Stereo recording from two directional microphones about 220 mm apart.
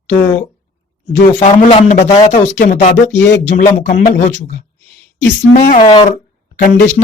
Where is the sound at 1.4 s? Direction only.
25° left (ahead or behind).